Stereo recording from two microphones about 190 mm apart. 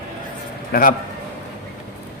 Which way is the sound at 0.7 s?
45° left (ahead or behind).